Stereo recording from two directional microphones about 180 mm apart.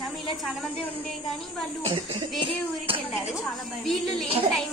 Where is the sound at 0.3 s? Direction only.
Centre (ahead or behind).